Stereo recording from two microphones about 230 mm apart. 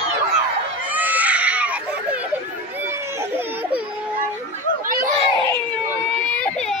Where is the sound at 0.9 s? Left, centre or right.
Centre.